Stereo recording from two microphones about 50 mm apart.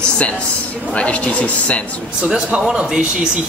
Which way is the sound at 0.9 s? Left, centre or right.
Left.